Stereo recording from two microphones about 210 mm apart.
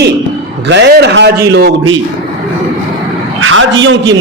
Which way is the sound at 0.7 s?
50° right (ahead or behind).